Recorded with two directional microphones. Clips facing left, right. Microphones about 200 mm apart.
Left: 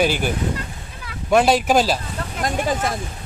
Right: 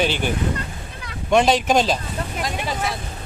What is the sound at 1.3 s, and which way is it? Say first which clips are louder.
Speech: left 1 dB; 10° left (ahead or behind).